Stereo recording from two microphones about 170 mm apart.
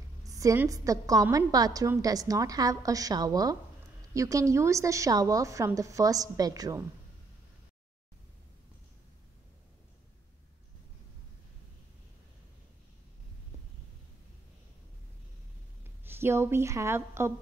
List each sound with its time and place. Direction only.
0.2 s a woman's voice: 20° right (ahead or behind)
16.0 s a woman's voice: 15° right (ahead or behind)